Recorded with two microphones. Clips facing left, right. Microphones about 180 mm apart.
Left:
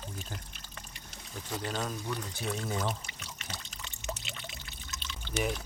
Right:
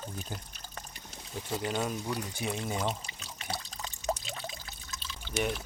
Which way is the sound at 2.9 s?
35° right (ahead or behind).